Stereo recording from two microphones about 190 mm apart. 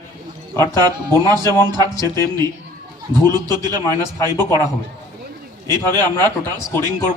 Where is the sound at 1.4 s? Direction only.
15° left (ahead or behind).